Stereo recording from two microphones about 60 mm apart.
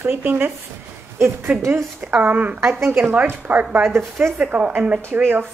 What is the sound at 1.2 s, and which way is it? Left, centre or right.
Speech, right.